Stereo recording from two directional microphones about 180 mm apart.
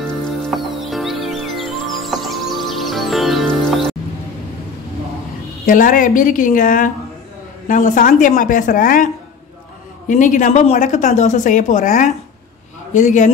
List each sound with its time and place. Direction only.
0.5 s music: centre (ahead or behind)
5.7 s a woman's voice: 50° left (ahead or behind)